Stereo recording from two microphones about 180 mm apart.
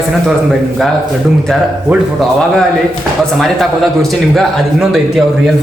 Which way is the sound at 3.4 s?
Centre (ahead or behind).